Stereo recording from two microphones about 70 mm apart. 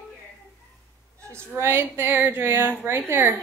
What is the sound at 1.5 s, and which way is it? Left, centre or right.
A woman's voice, right.